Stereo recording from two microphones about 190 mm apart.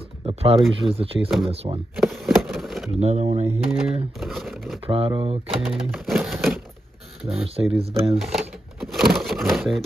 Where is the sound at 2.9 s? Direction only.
35° right (ahead or behind).